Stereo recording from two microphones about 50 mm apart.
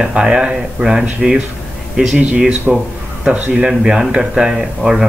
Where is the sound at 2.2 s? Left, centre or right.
Right.